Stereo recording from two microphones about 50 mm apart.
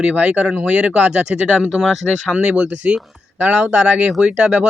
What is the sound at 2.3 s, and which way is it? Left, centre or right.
A man's voice, right.